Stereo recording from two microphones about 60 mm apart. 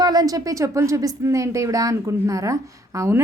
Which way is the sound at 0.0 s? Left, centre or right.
Right.